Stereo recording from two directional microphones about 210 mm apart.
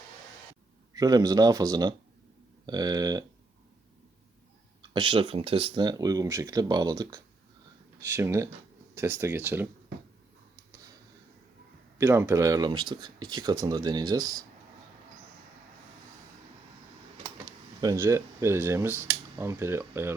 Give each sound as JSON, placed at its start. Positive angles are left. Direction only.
{"t": 0.9, "sound": "speech", "side_deg": -15}
{"t": 4.8, "sound": "speech", "side_deg": -25}
{"t": 11.9, "sound": "speech", "side_deg": -10}
{"t": 17.7, "sound": "speech", "side_deg": -15}